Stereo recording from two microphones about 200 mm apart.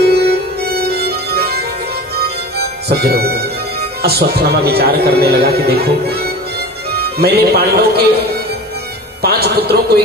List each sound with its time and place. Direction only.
0.0 s music: 55° right (ahead or behind)
4.0 s a man's voice: 50° right (ahead or behind)
9.2 s a man's voice: 50° right (ahead or behind)